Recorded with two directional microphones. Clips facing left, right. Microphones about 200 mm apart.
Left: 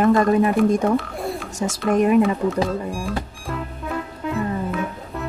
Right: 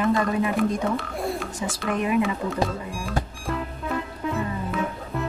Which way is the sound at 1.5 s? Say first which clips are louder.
Left 7 dB; 45° left (ahead or behind).